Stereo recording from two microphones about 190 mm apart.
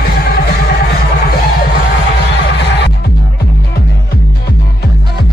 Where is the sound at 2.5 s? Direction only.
65° left (ahead or behind).